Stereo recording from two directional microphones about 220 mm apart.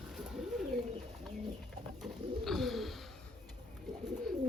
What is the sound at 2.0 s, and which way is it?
Bird, centre (ahead or behind).